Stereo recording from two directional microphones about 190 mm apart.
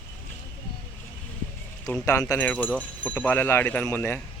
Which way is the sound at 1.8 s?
15° left (ahead or behind).